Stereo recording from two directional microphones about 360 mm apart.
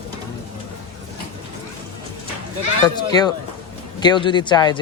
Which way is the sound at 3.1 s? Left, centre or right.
Centre.